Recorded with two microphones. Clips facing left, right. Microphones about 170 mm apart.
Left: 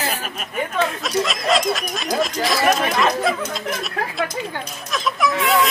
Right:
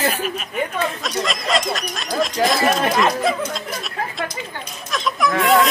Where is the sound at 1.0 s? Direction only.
Centre (ahead or behind).